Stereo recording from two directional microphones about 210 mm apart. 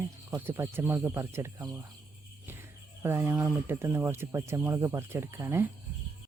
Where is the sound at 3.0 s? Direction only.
10° right (ahead or behind).